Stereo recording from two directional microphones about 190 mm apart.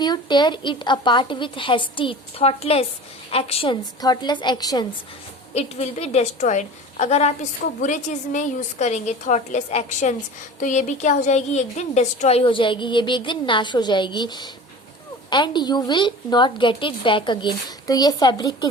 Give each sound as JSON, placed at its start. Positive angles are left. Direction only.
{"t": 0.0, "sound": "a woman's voice", "side_deg": 25}
{"t": 5.5, "sound": "a woman's voice", "side_deg": 35}